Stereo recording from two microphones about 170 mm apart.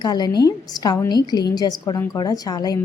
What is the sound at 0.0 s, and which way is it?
A woman's voice, 25° left (ahead or behind).